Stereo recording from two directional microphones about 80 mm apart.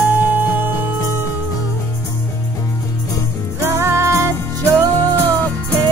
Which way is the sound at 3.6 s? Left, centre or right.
Right.